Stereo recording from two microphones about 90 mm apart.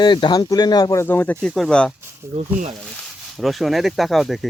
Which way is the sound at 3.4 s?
Centre (ahead or behind).